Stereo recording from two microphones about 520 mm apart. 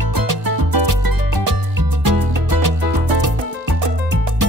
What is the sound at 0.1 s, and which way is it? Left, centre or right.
Music, right.